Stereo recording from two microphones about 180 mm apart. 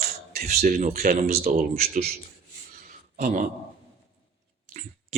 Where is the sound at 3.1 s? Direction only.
45° right (ahead or behind).